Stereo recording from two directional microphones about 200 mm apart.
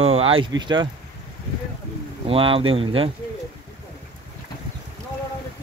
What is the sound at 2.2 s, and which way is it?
Speech, 25° right (ahead or behind).